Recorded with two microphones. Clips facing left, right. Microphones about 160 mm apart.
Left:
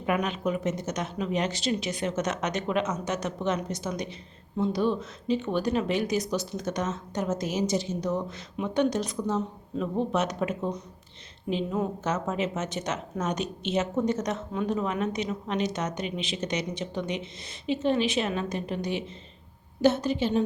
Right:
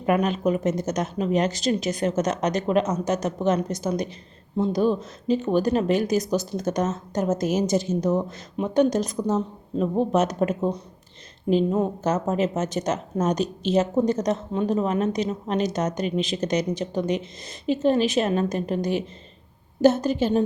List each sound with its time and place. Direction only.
0.0 s a woman's voice: 40° right (ahead or behind)